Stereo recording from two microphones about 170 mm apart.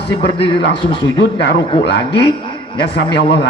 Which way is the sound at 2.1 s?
30° left (ahead or behind).